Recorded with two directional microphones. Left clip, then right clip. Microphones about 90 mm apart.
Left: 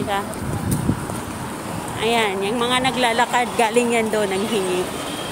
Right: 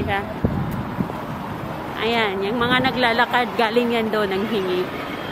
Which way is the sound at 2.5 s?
10° right (ahead or behind).